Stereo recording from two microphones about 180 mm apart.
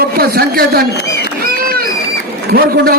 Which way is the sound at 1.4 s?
55° right (ahead or behind).